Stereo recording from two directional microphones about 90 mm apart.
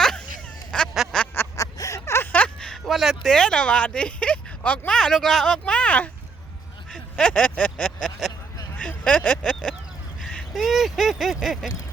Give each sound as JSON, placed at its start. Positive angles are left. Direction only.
{"t": 0.7, "sound": "quack", "side_deg": 10}
{"t": 1.5, "sound": "a sound", "side_deg": 40}
{"t": 4.9, "sound": "speech", "side_deg": 5}
{"t": 7.2, "sound": "speech", "side_deg": 10}
{"t": 8.8, "sound": "vehicle", "side_deg": 10}
{"t": 10.5, "sound": "speech", "side_deg": 0}